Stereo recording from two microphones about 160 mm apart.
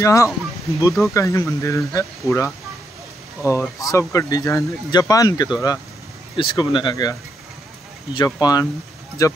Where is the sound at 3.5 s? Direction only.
20° left (ahead or behind).